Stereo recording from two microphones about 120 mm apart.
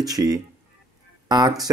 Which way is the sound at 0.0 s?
30° right (ahead or behind).